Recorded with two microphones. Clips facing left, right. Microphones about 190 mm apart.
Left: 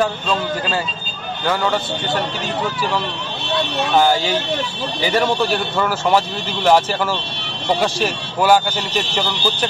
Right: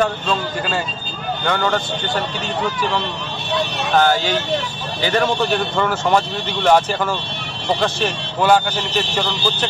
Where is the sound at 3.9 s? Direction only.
10° left (ahead or behind).